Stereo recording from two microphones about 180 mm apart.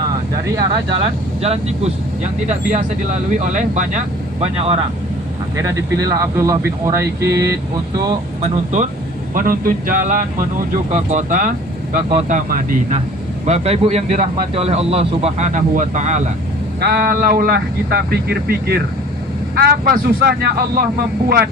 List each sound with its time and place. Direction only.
0.5 s speech: 25° right (ahead or behind)
5.5 s speech: 15° right (ahead or behind)
9.3 s speech: 50° right (ahead or behind)
13.4 s speech: 35° right (ahead or behind)
16.8 s speech: 60° right (ahead or behind)